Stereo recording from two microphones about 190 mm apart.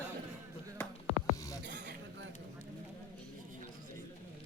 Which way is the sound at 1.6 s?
65° right (ahead or behind).